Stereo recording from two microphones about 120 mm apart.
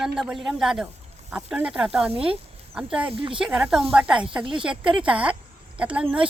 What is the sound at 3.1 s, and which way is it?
Speech, 50° right (ahead or behind).